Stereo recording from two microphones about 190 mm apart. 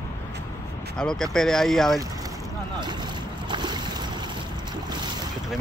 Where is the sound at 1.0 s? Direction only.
5° left (ahead or behind).